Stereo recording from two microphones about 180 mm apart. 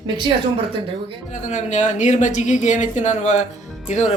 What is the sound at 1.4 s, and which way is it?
Speech, 40° left (ahead or behind).